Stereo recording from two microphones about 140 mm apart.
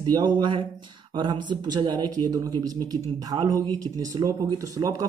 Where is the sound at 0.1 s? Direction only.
35° right (ahead or behind).